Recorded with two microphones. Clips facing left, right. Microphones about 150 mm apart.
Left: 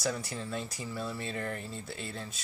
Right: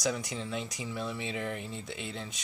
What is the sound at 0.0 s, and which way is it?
Speech, 5° left (ahead or behind).